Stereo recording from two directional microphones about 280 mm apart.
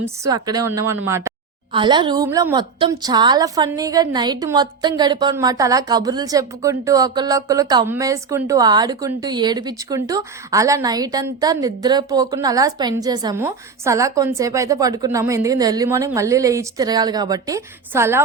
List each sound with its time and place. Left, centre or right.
0.0 s a woman's voice: centre